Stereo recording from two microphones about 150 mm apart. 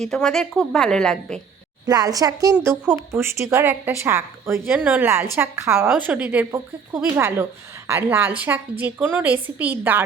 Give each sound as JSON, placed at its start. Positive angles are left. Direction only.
{"t": 0.0, "sound": "a woman's voice", "side_deg": 5}
{"t": 1.9, "sound": "a woman's voice", "side_deg": -25}
{"t": 2.6, "sound": "a woman's voice", "side_deg": -15}